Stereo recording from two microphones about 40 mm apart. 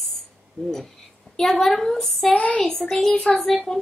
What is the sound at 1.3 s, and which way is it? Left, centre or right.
Speech, centre.